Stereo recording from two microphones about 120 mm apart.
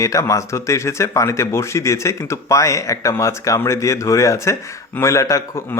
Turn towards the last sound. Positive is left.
turn(degrees=25)  # may be behind; listen again after turning